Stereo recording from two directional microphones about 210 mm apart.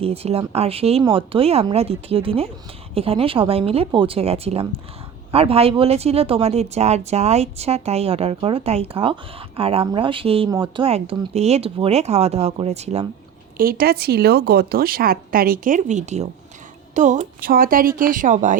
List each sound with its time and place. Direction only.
0.0 s speech: 30° right (ahead or behind)
13.6 s speech: 45° right (ahead or behind)